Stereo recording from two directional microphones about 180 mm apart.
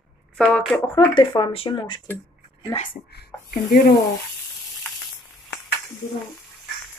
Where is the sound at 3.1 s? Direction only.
55° left (ahead or behind).